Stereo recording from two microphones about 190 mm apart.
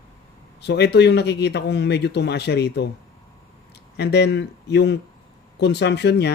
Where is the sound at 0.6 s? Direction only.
65° left (ahead or behind).